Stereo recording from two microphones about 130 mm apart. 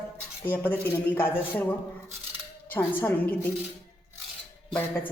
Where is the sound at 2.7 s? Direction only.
15° left (ahead or behind).